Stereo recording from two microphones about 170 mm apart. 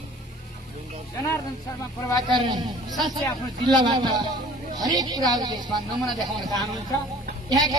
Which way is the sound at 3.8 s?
25° right (ahead or behind).